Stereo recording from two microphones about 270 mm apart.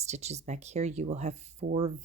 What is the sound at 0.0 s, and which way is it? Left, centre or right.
Speech, right.